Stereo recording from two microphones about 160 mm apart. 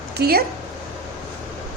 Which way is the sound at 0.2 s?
70° right (ahead or behind).